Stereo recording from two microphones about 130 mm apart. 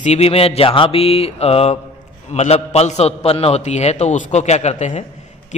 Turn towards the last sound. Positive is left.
turn(degrees=60)  # may be behind; listen again after turning